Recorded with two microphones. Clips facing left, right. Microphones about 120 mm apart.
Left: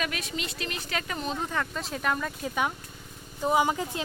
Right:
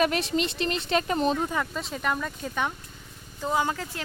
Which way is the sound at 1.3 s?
10° right (ahead or behind).